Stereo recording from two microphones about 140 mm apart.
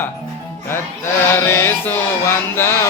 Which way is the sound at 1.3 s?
15° left (ahead or behind).